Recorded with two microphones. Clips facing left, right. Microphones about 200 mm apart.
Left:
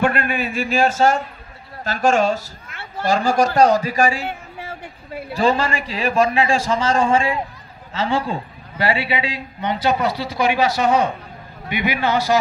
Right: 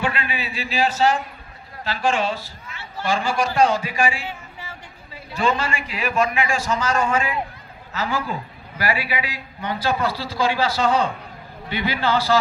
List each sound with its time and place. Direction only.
0.0 s a man's voice: 50° left (ahead or behind)
3.1 s a man's voice: 40° left (ahead or behind)
4.6 s a sound: 60° left (ahead or behind)
5.3 s a man's voice: 35° left (ahead or behind); by 12.4 s 15° left (ahead or behind)